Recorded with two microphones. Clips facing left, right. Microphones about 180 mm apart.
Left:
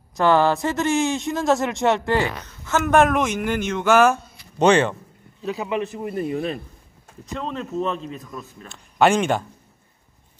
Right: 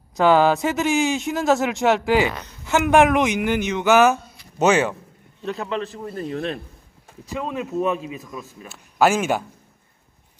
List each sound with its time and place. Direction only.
0.2 s speech: 10° right (ahead or behind)
2.6 s speech: 15° right (ahead or behind)
2.9 s speech: 5° right (ahead or behind)
5.4 s speech: 5° left (ahead or behind)
7.2 s a man's voice: 10° right (ahead or behind)